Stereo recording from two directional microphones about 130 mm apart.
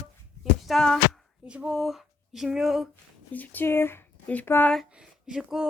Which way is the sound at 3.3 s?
15° left (ahead or behind).